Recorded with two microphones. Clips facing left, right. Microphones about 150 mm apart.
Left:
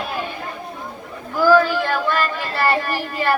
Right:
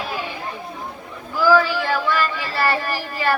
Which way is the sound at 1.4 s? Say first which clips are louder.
Left 2 dB; 55° left (ahead or behind).